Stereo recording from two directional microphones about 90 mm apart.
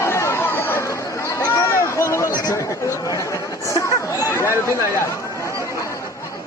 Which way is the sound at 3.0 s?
40° left (ahead or behind).